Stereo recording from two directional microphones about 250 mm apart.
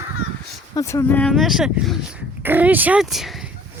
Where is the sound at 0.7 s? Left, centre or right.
Centre.